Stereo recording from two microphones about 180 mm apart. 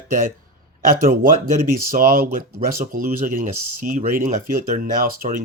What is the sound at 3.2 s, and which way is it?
Speech, 50° right (ahead or behind).